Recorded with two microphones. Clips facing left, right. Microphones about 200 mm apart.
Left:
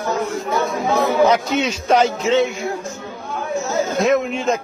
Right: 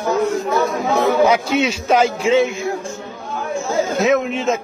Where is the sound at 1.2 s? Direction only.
10° right (ahead or behind).